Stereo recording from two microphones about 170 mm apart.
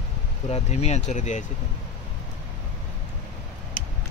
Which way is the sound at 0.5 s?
40° left (ahead or behind).